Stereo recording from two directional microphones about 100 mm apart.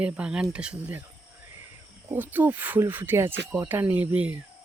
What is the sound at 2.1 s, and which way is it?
Speech, 20° right (ahead or behind).